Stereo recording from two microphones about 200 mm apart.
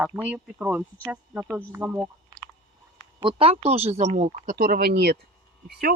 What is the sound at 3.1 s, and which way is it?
Speech, 25° right (ahead or behind).